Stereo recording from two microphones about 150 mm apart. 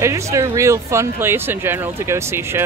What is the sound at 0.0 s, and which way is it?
Speech, 20° right (ahead or behind).